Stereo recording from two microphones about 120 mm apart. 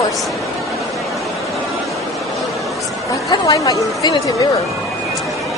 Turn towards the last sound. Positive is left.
turn(degrees=30)  # may be behind; listen again after turning